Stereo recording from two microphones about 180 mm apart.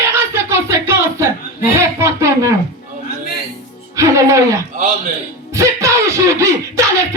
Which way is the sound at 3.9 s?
15° right (ahead or behind).